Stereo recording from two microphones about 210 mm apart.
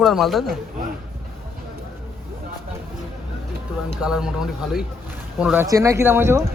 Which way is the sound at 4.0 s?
5° right (ahead or behind).